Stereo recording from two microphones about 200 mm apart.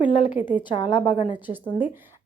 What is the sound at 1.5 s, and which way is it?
Speech, 10° right (ahead or behind).